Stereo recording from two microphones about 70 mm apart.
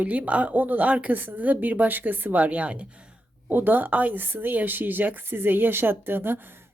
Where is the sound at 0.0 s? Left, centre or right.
Right.